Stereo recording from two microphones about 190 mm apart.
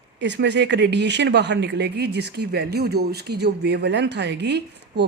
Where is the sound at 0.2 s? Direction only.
65° right (ahead or behind).